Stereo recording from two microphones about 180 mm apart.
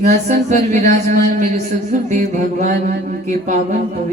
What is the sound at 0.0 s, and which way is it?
A man's voice, 45° right (ahead or behind).